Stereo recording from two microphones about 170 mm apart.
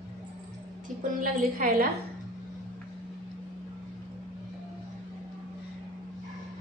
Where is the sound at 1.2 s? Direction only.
55° right (ahead or behind).